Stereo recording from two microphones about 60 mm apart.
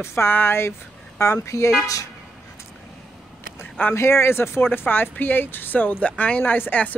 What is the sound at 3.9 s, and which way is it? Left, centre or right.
Speech, left.